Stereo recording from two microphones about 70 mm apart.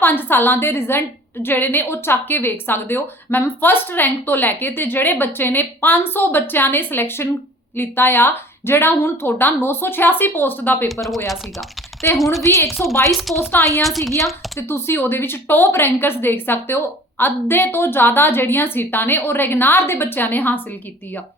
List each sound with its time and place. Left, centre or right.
0.0 s a woman's voice: left
12.1 s speech: centre
12.4 s a woman's voice: left
13.1 s speech: centre
14.7 s a woman's voice: left